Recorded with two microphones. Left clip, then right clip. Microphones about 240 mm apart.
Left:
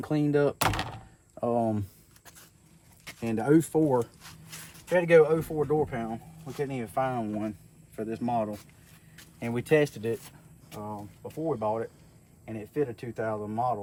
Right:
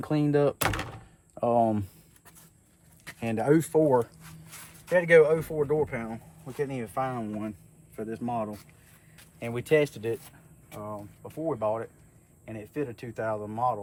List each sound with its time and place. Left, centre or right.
0.0 s speech: centre
3.2 s speech: centre
4.0 s a sound: centre
5.4 s speech: centre